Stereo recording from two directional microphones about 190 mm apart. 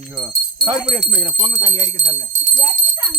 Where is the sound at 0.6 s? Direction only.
30° right (ahead or behind).